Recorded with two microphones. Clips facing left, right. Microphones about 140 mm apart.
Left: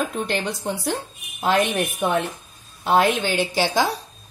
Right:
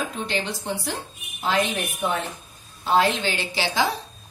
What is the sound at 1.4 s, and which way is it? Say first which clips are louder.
A woman's voice: left 4 dB; 55° left (ahead or behind).